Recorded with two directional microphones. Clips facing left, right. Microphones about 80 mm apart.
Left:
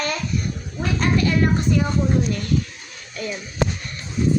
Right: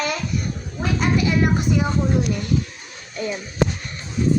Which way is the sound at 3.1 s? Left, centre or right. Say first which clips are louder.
Right 3 dB; right.